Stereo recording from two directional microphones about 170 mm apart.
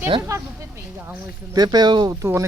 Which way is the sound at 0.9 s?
10° right (ahead or behind).